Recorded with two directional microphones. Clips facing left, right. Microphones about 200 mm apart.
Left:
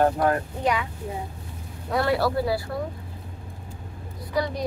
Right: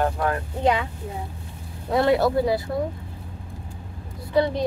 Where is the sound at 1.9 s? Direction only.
20° right (ahead or behind).